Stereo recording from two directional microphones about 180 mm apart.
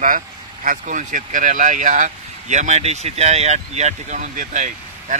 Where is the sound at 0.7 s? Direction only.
45° right (ahead or behind).